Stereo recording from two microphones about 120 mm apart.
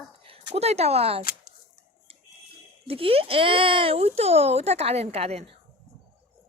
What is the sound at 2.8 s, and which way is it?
Speech, 50° right (ahead or behind).